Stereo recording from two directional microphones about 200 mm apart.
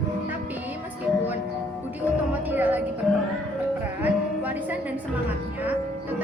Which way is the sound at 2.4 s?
10° right (ahead or behind).